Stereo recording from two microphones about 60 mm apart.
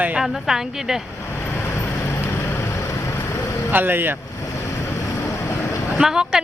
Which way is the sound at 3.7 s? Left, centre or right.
Right.